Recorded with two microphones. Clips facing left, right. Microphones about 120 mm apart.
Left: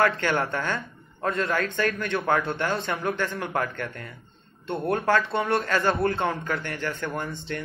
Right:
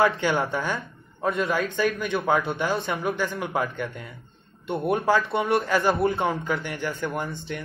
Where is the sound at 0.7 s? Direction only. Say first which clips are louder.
Even; centre (ahead or behind).